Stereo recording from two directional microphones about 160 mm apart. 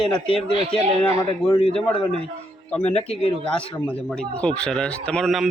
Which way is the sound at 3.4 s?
5° left (ahead or behind).